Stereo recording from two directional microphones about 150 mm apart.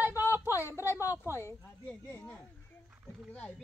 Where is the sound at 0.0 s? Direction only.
15° right (ahead or behind).